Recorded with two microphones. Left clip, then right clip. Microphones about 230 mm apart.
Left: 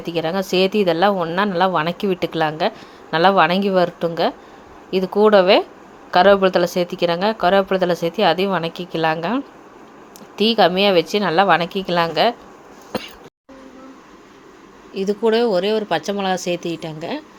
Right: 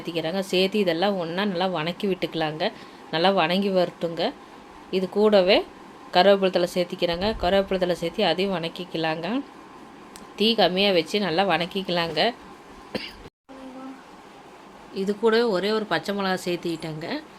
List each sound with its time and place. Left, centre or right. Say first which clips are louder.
0.0 s speech: left 6 dB; centre
12.9 s a sound: left 5 dB; centre
14.9 s speech: left 4 dB; centre